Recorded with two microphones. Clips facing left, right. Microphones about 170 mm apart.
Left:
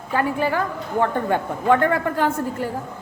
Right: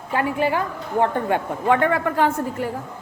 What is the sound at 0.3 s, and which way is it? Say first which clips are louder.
A woman's voice: even; 40° left (ahead or behind).